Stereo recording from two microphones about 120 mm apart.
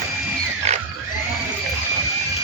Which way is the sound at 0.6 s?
65° right (ahead or behind).